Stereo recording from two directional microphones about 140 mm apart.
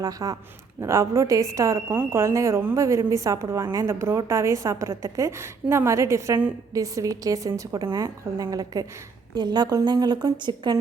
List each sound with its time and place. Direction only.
0.0 s a woman's voice: 25° right (ahead or behind)